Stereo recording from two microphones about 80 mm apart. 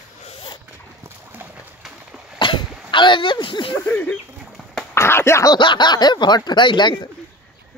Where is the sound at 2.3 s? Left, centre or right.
Left.